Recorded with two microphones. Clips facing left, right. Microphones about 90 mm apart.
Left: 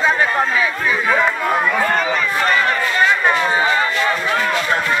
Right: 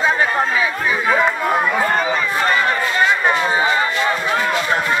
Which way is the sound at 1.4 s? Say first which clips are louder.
Even; 20° right (ahead or behind).